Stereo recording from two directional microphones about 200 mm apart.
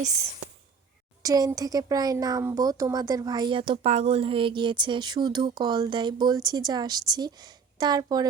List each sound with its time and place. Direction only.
1.2 s a child's voice: 20° right (ahead or behind)